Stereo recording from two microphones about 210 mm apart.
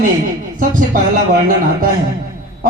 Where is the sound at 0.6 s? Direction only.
40° right (ahead or behind).